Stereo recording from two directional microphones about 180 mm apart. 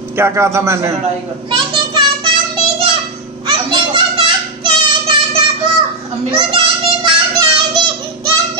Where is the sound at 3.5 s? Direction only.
30° right (ahead or behind).